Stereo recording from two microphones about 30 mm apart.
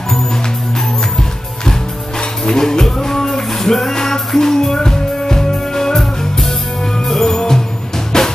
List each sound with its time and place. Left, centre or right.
2.4 s music: centre